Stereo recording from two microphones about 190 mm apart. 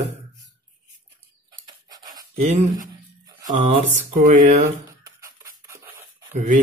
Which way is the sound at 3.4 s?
35° right (ahead or behind).